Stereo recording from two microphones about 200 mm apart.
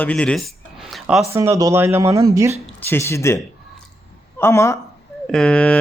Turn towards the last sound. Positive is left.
turn(degrees=5)  # may be behind; listen again after turning